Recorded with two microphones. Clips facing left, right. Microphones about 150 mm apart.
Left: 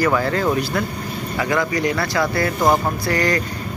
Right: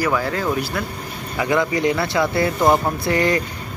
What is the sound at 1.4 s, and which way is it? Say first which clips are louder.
Speech: right 2 dB; 20° right (ahead or behind).